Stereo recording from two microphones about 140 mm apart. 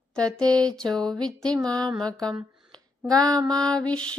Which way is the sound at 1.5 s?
25° right (ahead or behind).